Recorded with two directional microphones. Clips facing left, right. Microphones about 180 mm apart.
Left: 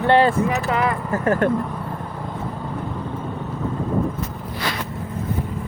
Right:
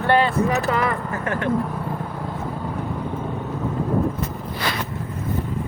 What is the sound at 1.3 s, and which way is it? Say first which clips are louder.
Speech: left 6 dB; 45° left (ahead or behind).